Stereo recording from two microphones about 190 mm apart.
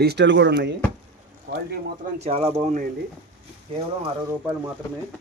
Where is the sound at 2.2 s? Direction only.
35° right (ahead or behind).